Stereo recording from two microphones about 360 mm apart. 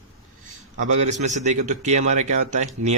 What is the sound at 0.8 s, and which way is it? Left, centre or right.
Speech, centre.